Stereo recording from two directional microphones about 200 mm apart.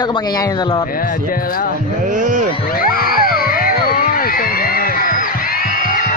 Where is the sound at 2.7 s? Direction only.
45° left (ahead or behind).